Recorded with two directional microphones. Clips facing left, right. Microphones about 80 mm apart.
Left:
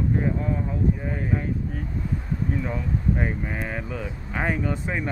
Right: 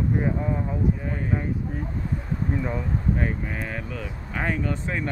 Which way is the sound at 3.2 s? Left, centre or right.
Centre.